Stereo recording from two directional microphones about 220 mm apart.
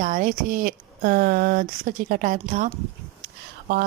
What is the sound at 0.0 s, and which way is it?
A woman's voice, 35° right (ahead or behind).